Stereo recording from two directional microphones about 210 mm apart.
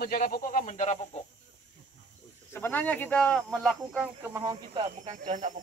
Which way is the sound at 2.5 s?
10° left (ahead or behind).